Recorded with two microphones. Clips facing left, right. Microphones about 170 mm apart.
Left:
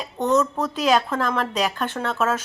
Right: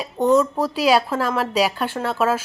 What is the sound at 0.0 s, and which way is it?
Speech, 10° right (ahead or behind).